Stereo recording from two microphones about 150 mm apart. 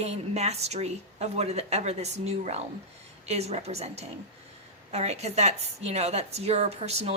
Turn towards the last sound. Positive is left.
turn(degrees=-45)  # may be behind; listen again after turning